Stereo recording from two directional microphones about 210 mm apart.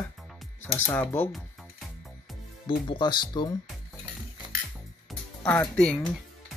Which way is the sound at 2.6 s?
20° left (ahead or behind).